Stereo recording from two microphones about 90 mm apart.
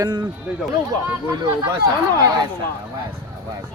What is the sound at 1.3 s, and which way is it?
Speech, 55° right (ahead or behind).